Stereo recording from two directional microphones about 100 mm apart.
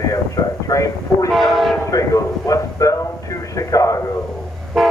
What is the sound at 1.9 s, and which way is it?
A man's voice, 35° left (ahead or behind).